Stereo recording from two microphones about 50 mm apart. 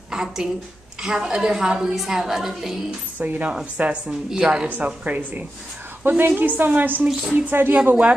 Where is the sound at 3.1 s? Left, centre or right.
Right.